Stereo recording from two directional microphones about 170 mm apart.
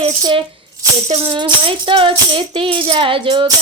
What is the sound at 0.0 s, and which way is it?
Speech, 30° right (ahead or behind).